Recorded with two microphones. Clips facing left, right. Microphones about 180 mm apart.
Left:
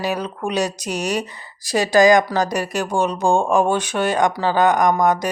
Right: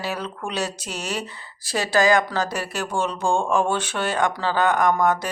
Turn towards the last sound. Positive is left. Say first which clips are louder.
# left 3 dB
turn(degrees=15)  # may be behind; listen again after turning